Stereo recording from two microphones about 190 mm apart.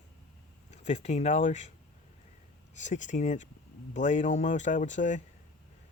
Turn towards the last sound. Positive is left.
turn(degrees=40)  # may be behind; listen again after turning